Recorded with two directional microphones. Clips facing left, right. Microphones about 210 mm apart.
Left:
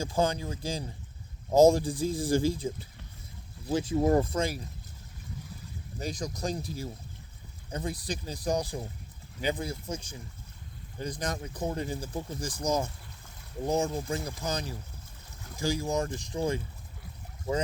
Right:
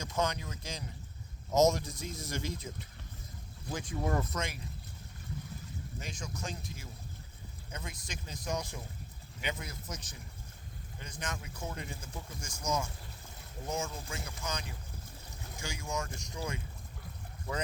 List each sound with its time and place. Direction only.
0.0 s speech: 30° left (ahead or behind)
3.7 s speech: 30° left (ahead or behind)
6.0 s speech: 35° left (ahead or behind)